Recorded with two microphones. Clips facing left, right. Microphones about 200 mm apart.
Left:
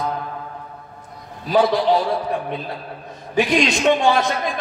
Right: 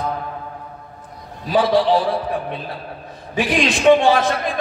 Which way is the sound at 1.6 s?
30° right (ahead or behind).